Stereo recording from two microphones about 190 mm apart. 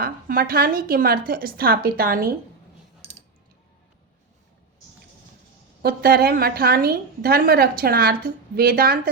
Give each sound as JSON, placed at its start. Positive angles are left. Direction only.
{"t": 0.0, "sound": "a woman's voice", "side_deg": -45}
{"t": 3.0, "sound": "a sound", "side_deg": -35}
{"t": 5.8, "sound": "a woman's voice", "side_deg": -55}